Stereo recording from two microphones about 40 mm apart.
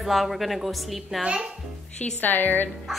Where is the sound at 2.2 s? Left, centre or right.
Left.